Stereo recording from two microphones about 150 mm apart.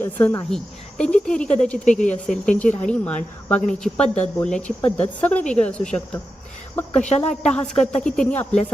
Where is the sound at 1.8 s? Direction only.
55° left (ahead or behind).